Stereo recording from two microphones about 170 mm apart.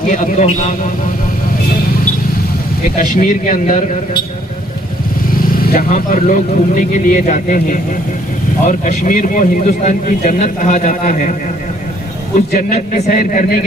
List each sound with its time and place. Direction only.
0.1 s a man's voice: 45° left (ahead or behind)
3.2 s a man's voice: 55° left (ahead or behind)
5.5 s a man's voice: 55° left (ahead or behind)
12.5 s a man's voice: 50° left (ahead or behind)